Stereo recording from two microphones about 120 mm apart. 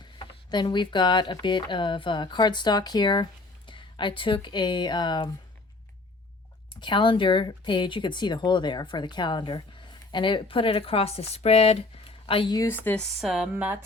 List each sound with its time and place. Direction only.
0.0 s speech: 35° left (ahead or behind)
6.7 s speech: 40° left (ahead or behind)
13.0 s speech: centre (ahead or behind)
13.5 s a woman's voice: 15° right (ahead or behind)